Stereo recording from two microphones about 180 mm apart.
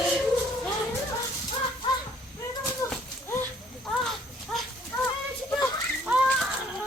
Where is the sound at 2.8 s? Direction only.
20° left (ahead or behind).